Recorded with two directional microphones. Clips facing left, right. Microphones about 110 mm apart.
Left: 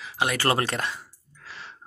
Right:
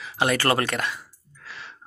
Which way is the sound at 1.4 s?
35° left (ahead or behind).